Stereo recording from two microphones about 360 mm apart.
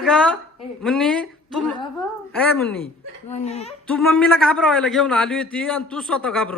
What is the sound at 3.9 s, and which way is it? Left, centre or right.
A man's voice, centre.